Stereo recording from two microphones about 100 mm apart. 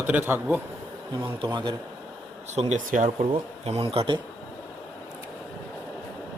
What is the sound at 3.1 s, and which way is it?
A man's voice, 85° right.